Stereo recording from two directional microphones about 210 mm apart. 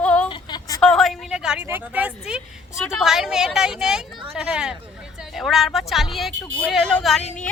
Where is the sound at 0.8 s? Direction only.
Centre (ahead or behind).